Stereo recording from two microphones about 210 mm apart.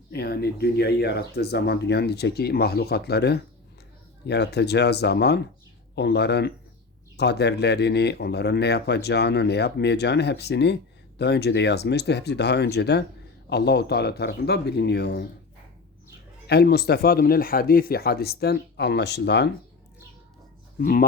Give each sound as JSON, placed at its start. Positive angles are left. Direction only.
{"t": 0.1, "sound": "speech", "side_deg": 50}
{"t": 16.5, "sound": "speech", "side_deg": 50}
{"t": 20.7, "sound": "speech", "side_deg": 45}